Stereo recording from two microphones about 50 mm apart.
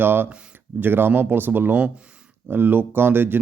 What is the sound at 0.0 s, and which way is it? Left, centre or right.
Speech, right.